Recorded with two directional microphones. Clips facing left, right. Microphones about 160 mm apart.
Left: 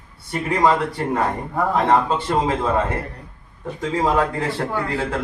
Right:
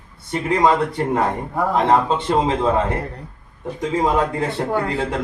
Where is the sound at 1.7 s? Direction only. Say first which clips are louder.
Right 1 dB; 20° right (ahead or behind).